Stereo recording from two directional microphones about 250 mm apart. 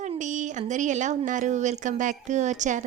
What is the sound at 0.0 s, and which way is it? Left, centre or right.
Speech, right.